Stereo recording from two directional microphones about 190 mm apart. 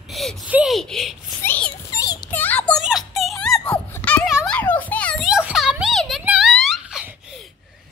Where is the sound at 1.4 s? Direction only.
10° left (ahead or behind).